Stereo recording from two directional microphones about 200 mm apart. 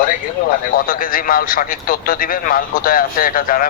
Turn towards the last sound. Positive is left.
turn(degrees=45)  # may be behind; listen again after turning